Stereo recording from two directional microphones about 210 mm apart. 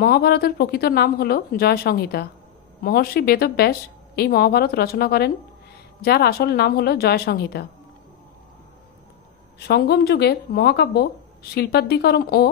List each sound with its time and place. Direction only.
0.0 s a woman's voice: 50° left (ahead or behind)
9.7 s a woman's voice: 50° left (ahead or behind)